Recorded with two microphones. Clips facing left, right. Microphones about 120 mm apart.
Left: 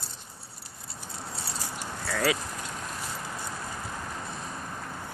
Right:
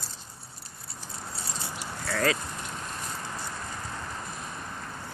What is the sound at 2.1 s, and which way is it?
Vehicle, 10° left (ahead or behind).